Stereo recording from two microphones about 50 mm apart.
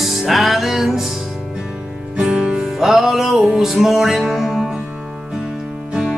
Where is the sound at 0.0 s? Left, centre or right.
Centre.